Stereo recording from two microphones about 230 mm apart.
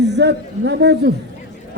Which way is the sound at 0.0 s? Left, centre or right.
Right.